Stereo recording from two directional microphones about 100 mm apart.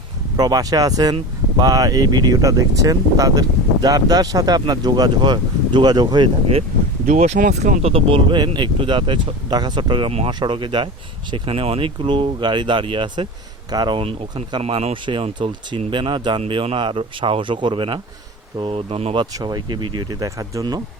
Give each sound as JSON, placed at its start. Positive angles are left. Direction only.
{"t": 0.3, "sound": "speech", "side_deg": -40}
{"t": 7.3, "sound": "speech", "side_deg": -90}
{"t": 10.1, "sound": "speech", "side_deg": -85}
{"t": 10.4, "sound": "speech", "side_deg": -50}
{"t": 11.4, "sound": "speech", "side_deg": -75}
{"t": 13.7, "sound": "speech", "side_deg": -45}
{"t": 14.0, "sound": "speech", "side_deg": -70}
{"t": 14.6, "sound": "speech", "side_deg": -90}
{"t": 15.4, "sound": "speech", "side_deg": -60}
{"t": 16.4, "sound": "speech", "side_deg": -70}
{"t": 18.6, "sound": "speech", "side_deg": -80}
{"t": 19.1, "sound": "speech", "side_deg": -45}